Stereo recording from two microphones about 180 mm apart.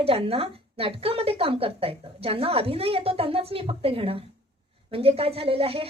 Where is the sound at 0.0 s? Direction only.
35° right (ahead or behind).